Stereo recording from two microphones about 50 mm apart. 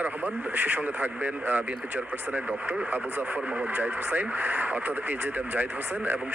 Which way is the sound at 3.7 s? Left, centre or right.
Right.